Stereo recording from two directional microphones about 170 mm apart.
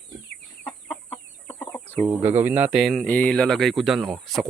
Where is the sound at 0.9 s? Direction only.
5° left (ahead or behind).